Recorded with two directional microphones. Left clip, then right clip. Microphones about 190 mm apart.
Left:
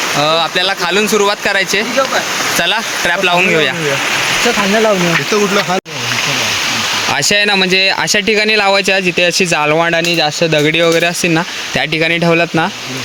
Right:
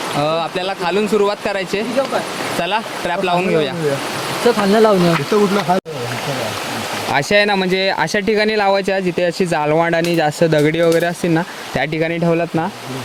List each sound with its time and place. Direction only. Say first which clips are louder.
0.2 s speech: left 5 dB; 5° left (ahead or behind)
4.7 s speech: right 1 dB; 50° right (ahead or behind)
7.1 s speech: left 1 dB; centre (ahead or behind)
9.9 s speech: left 3 dB; 20° right (ahead or behind)
10.6 s speech: left 5 dB; 10° right (ahead or behind)